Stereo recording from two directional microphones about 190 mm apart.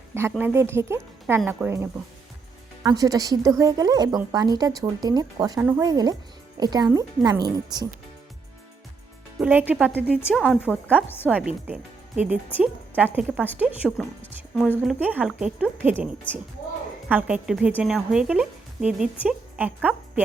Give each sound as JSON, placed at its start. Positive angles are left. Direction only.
{"t": 0.1, "sound": "speech", "side_deg": -10}
{"t": 9.4, "sound": "speech", "side_deg": -10}
{"t": 10.3, "sound": "a woman's voice", "side_deg": 5}
{"t": 10.7, "sound": "speech", "side_deg": -10}
{"t": 14.2, "sound": "a woman's voice", "side_deg": 5}
{"t": 17.1, "sound": "a woman's voice", "side_deg": -5}